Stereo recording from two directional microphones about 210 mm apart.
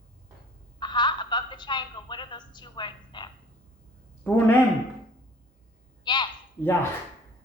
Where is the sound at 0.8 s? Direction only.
20° left (ahead or behind).